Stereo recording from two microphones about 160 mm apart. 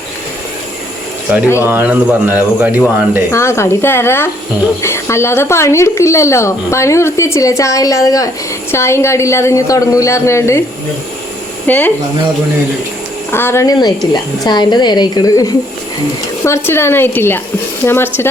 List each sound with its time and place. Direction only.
1.3 s speech: 10° right (ahead or behind)
3.3 s a woman's voice: 15° left (ahead or behind)
11.7 s a woman's voice: 10° left (ahead or behind)
13.3 s a woman's voice: 15° left (ahead or behind)